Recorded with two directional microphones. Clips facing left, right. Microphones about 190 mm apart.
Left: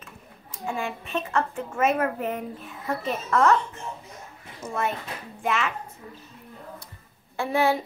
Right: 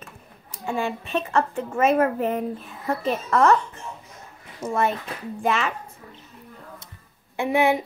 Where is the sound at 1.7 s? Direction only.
35° right (ahead or behind).